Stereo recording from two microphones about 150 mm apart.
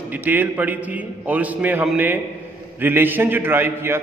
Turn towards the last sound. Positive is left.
turn(degrees=-15)  # may be behind; listen again after turning